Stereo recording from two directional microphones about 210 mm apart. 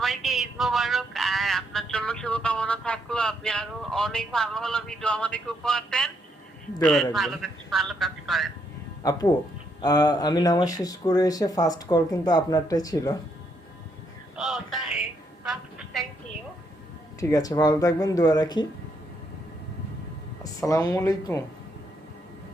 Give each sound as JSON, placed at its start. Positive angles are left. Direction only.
{"t": 0.0, "sound": "a man's voice", "side_deg": 0}
{"t": 9.0, "sound": "speech", "side_deg": 15}
{"t": 14.3, "sound": "a man's voice", "side_deg": 0}
{"t": 15.4, "sound": "a sound", "side_deg": 0}
{"t": 17.2, "sound": "speech", "side_deg": 15}
{"t": 20.4, "sound": "speech", "side_deg": 15}